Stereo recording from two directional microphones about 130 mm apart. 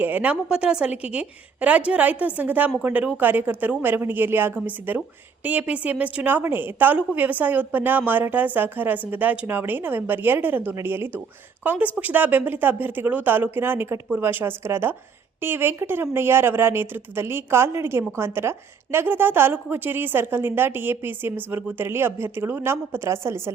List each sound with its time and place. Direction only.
0.0 s speech: 10° right (ahead or behind)